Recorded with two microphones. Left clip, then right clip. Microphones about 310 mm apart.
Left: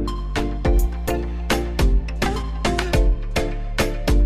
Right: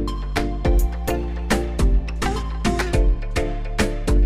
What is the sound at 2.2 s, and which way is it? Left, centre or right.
Music, centre.